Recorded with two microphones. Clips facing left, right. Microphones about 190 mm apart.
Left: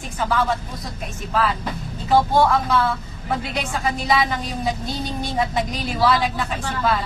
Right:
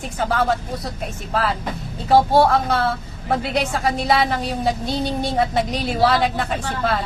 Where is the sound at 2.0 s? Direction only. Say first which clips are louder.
Right 3 dB; 65° right (ahead or behind).